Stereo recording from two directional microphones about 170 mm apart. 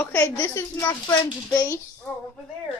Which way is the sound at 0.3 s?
20° left (ahead or behind).